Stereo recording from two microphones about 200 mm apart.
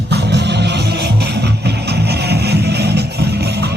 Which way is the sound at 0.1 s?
55° right (ahead or behind).